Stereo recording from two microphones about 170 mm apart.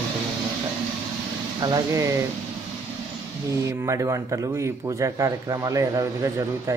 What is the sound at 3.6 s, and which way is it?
Speech, 20° right (ahead or behind).